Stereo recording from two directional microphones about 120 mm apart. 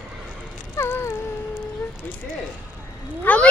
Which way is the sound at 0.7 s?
20° left (ahead or behind).